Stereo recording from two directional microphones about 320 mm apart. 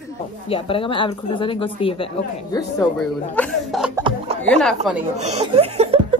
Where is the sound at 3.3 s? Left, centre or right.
Centre.